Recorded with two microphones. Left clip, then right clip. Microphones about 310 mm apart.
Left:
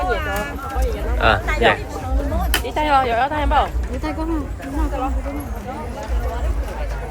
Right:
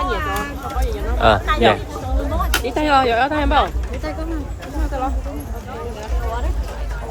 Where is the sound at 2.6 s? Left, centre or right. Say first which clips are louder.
Right 1 dB; right.